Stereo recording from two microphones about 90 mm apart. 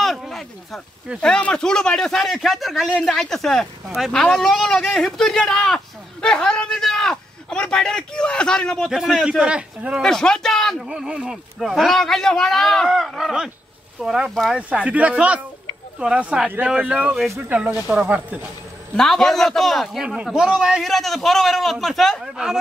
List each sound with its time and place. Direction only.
0.0 s a sound: centre (ahead or behind)
1.2 s a man's voice: 10° left (ahead or behind)
8.9 s a man's voice: 5° right (ahead or behind)
10.0 s a man's voice: 5° left (ahead or behind)
10.9 s a man's voice: 10° right (ahead or behind)
14.7 s a man's voice: 15° right (ahead or behind)
18.9 s a man's voice: 5° left (ahead or behind)